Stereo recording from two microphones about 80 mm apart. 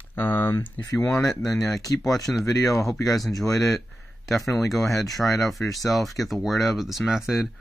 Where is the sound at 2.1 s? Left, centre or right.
Centre.